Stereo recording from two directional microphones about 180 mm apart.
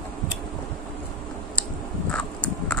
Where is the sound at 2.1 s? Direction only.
5° left (ahead or behind).